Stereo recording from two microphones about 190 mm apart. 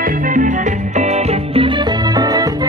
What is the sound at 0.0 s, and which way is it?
Music, 45° right (ahead or behind).